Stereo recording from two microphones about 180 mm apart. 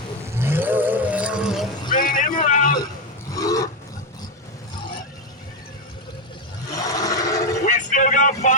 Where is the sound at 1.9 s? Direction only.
45° left (ahead or behind).